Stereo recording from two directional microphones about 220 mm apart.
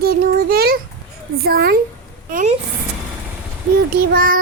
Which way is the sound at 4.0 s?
40° right (ahead or behind).